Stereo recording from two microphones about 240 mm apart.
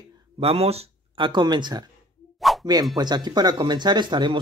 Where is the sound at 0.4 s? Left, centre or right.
Right.